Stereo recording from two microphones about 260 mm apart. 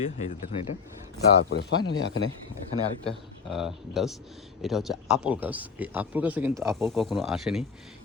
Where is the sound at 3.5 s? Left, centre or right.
Centre.